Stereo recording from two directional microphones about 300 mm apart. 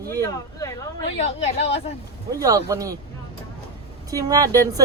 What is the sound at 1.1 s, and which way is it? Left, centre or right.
Speech, left.